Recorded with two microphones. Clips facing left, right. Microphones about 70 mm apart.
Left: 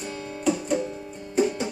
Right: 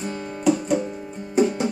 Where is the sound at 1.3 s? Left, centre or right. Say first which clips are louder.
Right 4 dB; centre.